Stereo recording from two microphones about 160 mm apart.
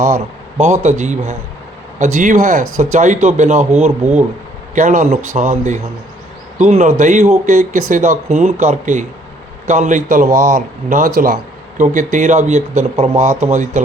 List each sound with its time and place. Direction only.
0.0 s speech: 20° right (ahead or behind)
0.6 s speech: 45° right (ahead or behind)